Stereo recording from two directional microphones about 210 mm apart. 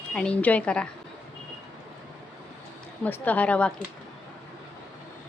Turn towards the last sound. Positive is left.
turn(degrees=5)  # may be behind; listen again after turning